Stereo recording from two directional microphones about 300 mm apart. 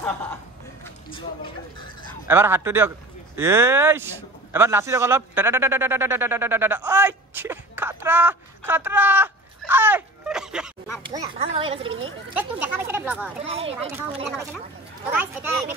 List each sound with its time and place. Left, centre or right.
0.0 s speech: centre
1.1 s speech: centre
2.2 s a man's voice: centre
11.0 s a man's voice: centre
12.4 s speech: centre
13.5 s speech: centre
15.1 s speech: centre